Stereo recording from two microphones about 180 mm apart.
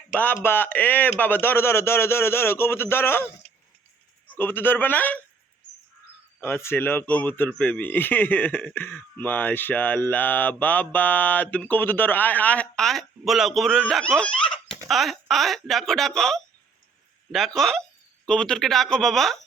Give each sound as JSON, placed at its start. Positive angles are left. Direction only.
{"t": 0.4, "sound": "mantra", "side_deg": 10}
{"t": 3.4, "sound": "a sound", "side_deg": 30}
{"t": 4.3, "sound": "mantra", "side_deg": 10}
{"t": 6.4, "sound": "mantra", "side_deg": 15}
{"t": 14.8, "sound": "speech", "side_deg": 0}